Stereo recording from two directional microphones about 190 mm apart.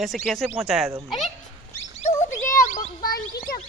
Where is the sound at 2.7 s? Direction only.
45° left (ahead or behind).